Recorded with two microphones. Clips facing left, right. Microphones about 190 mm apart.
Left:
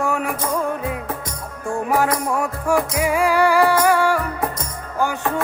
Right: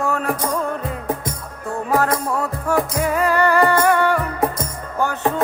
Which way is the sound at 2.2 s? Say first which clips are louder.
Left 1 dB; 15° left (ahead or behind).